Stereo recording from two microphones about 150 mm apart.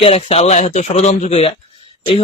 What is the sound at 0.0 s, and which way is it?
A man's voice, 40° left (ahead or behind).